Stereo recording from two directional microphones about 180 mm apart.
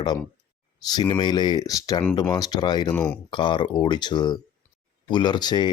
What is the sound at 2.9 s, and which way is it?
Speech, 5° left (ahead or behind).